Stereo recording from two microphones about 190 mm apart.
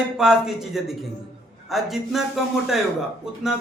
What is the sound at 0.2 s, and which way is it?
A man's voice, 5° right (ahead or behind).